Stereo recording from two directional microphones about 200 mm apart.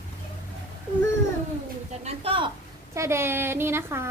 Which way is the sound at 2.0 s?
25° right (ahead or behind).